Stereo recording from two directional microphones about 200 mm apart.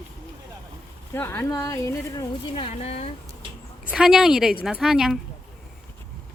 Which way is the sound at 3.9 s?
5° right (ahead or behind).